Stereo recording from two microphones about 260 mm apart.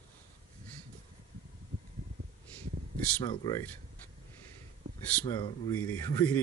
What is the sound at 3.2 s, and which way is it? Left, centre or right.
Speech, centre.